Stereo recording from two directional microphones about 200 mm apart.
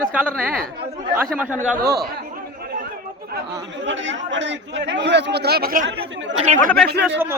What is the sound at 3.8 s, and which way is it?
Speech, 65° right (ahead or behind).